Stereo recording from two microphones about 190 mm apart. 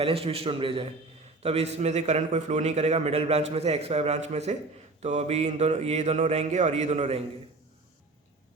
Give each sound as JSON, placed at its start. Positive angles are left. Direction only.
{"t": 0.0, "sound": "a man's voice", "side_deg": -30}